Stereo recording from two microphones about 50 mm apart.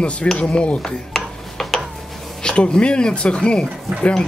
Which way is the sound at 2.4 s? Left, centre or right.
Centre.